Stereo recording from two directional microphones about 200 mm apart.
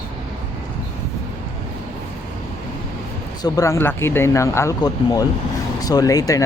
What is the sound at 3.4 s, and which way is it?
Speech, 15° left (ahead or behind).